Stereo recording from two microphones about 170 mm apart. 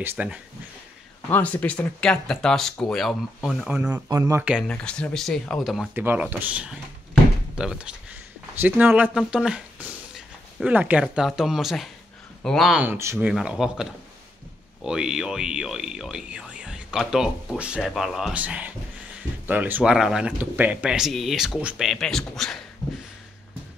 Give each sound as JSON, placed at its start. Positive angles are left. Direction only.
{"t": 0.0, "sound": "speech", "side_deg": -10}
{"t": 1.3, "sound": "speech", "side_deg": 10}
{"t": 3.7, "sound": "speech", "side_deg": -10}
{"t": 4.6, "sound": "speech", "side_deg": 5}
{"t": 5.9, "sound": "speech", "side_deg": -10}
{"t": 12.8, "sound": "speech", "side_deg": -15}
{"t": 13.3, "sound": "speech", "side_deg": -5}